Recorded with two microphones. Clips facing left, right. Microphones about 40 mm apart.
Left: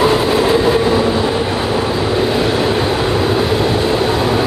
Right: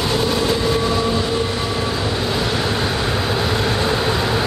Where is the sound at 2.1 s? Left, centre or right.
Centre.